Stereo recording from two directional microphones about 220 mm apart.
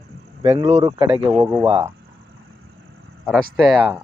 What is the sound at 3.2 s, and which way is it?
Speech, centre (ahead or behind).